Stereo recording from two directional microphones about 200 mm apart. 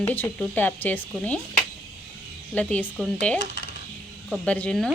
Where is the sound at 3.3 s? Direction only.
60° left (ahead or behind).